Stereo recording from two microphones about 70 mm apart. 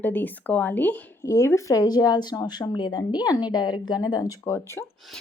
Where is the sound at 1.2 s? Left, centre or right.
Left.